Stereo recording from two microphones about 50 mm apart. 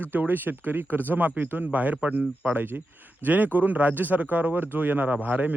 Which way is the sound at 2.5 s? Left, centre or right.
Right.